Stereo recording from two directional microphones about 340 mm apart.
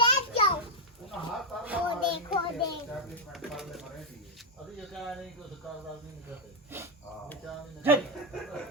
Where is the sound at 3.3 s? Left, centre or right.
Centre.